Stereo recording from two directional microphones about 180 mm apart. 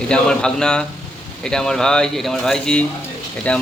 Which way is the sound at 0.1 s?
5° left (ahead or behind).